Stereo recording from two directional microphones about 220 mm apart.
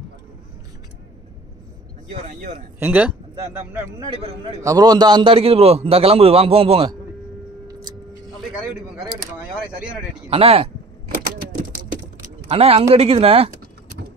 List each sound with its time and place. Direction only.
2.0 s speech: 35° right (ahead or behind)
2.8 s speech: 5° right (ahead or behind)
4.6 s a man's voice: 15° right (ahead or behind)
10.3 s a man's voice: 25° right (ahead or behind)
11.5 s typing: 35° right (ahead or behind)
12.4 s a man's voice: 25° right (ahead or behind)